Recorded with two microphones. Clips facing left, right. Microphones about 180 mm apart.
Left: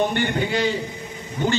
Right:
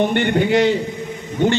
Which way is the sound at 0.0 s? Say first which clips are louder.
Right 5 dB; 60° right (ahead or behind).